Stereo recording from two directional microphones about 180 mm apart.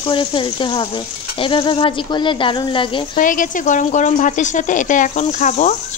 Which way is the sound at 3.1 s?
50° left (ahead or behind).